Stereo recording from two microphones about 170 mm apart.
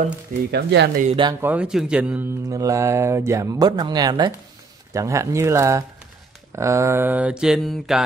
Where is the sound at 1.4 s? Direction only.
10° right (ahead or behind).